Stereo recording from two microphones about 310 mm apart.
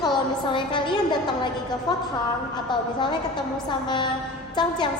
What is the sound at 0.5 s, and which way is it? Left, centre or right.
A woman's voice, centre.